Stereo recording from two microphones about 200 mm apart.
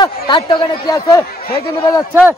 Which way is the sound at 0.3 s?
25° left (ahead or behind).